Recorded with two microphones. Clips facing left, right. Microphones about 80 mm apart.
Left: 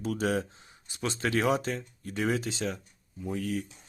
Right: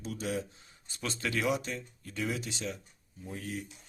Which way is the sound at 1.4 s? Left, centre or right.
Left.